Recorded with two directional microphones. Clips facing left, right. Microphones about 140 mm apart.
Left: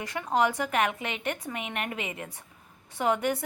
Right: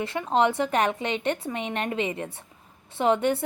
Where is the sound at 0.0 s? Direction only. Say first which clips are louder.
Right 3 dB; 25° right (ahead or behind).